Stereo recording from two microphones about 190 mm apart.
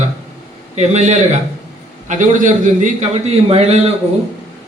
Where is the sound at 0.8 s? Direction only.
35° right (ahead or behind).